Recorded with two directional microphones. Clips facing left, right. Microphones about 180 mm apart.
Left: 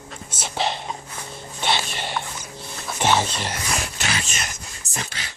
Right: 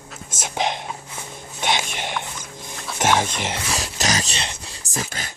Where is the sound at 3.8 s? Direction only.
40° right (ahead or behind).